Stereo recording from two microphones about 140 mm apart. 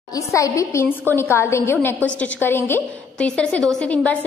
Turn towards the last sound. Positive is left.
turn(degrees=10)  # may be behind; listen again after turning